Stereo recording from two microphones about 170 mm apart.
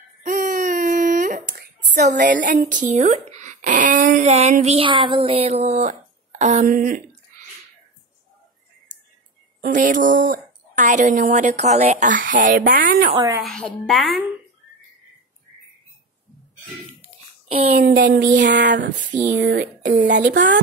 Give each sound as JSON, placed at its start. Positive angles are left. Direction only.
{"t": 0.2, "sound": "a sound", "side_deg": -55}
{"t": 2.2, "sound": "speech", "side_deg": -50}
{"t": 6.7, "sound": "speech", "side_deg": -55}
{"t": 9.6, "sound": "speech", "side_deg": -50}
{"t": 13.4, "sound": "a woman's voice", "side_deg": 5}
{"t": 18.0, "sound": "speech", "side_deg": -85}
{"t": 19.2, "sound": "speech", "side_deg": -80}